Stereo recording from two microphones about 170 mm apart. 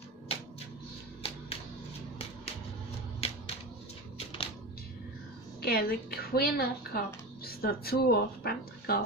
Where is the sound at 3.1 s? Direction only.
35° left (ahead or behind).